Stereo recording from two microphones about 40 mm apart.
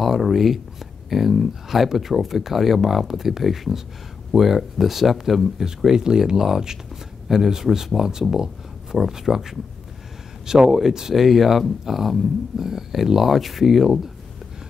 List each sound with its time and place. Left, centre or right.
0.0 s speech: centre
5.9 s speech: centre